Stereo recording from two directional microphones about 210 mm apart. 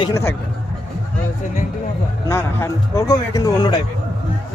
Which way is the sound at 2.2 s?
15° left (ahead or behind).